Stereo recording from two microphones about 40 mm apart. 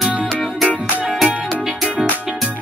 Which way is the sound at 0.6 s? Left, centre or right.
Right.